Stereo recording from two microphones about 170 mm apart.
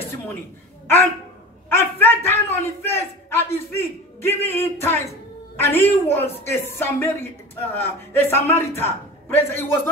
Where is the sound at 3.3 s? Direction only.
15° left (ahead or behind).